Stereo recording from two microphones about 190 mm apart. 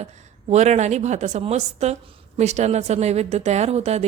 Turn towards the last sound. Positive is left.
turn(degrees=-35)  # may be behind; listen again after turning